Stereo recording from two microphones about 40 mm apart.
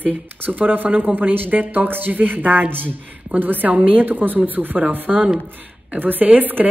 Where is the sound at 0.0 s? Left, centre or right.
Right.